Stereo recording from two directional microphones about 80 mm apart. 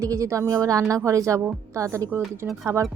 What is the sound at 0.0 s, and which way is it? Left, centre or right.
A woman's voice, right.